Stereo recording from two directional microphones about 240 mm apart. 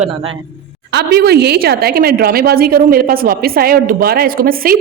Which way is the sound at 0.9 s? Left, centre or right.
Right.